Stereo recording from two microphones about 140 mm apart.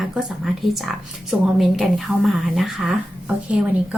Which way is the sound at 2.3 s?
Centre (ahead or behind).